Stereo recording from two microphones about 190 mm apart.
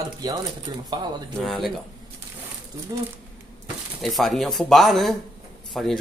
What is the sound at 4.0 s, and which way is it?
Speech, centre (ahead or behind).